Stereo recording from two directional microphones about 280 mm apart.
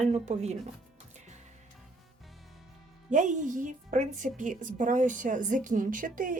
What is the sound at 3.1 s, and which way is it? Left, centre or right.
A woman's voice, right.